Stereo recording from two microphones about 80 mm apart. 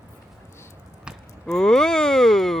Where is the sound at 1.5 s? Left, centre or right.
Centre.